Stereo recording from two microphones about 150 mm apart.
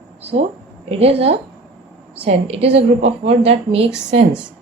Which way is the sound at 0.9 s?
40° right (ahead or behind).